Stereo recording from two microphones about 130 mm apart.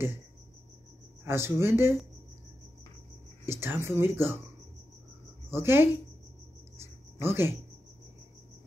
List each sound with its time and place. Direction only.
1.2 s speech: 20° right (ahead or behind)
3.4 s speech: 20° right (ahead or behind)
5.5 s speech: 20° right (ahead or behind)
6.8 s music: 20° right (ahead or behind)